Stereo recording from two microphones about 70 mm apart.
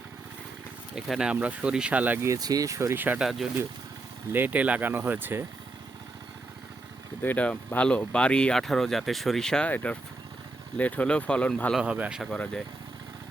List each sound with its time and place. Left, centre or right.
0.9 s speech: centre
1.3 s speech: centre
2.1 s speech: right
2.4 s speech: right
2.9 s speech: right
3.2 s speech: centre
4.3 s speech: right
7.2 s speech: left
8.6 s speech: centre
9.6 s speech: left
11.8 s a man's voice: centre
12.3 s speech: centre